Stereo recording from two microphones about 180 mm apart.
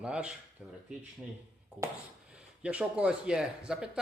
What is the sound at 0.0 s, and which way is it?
Speech, 5° right (ahead or behind).